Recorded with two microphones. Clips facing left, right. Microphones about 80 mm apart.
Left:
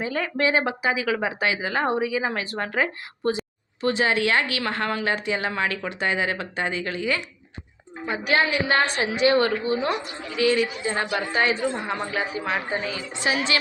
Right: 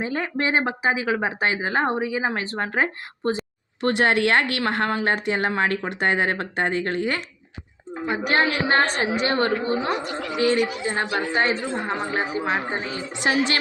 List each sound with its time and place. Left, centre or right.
0.0 s speech: right
3.8 s speech: right
4.9 s speech: right
10.8 s a woman's voice: right
13.2 s speech: right